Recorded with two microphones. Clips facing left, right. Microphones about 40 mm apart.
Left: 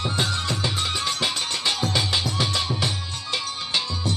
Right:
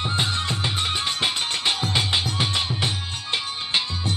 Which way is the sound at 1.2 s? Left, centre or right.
Right.